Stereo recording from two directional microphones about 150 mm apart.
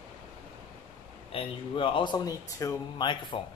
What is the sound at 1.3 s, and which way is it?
Speech, 35° left (ahead or behind).